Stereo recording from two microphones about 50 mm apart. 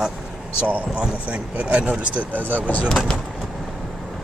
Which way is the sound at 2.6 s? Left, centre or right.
Left.